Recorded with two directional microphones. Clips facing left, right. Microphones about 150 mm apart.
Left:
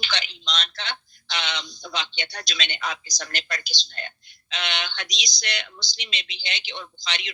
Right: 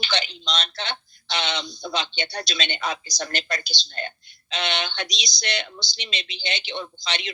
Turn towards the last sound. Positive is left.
turn(degrees=-30)  # may be behind; listen again after turning